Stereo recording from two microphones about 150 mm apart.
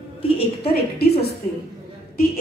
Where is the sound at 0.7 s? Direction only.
90° left.